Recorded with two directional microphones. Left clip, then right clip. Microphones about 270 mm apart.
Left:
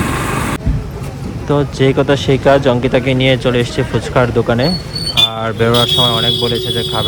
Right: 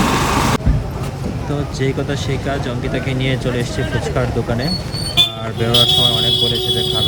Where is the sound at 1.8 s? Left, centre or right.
Centre.